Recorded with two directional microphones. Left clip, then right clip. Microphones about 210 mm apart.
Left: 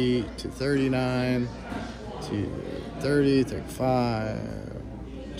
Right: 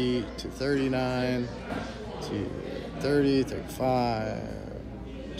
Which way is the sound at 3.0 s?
30° left (ahead or behind).